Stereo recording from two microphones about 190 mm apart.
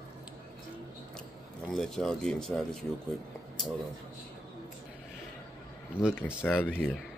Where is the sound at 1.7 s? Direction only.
Centre (ahead or behind).